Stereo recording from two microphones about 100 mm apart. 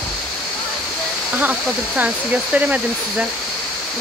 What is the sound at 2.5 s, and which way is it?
Speech, 15° right (ahead or behind).